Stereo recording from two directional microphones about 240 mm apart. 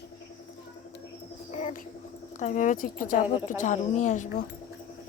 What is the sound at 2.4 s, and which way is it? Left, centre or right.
Speech, left.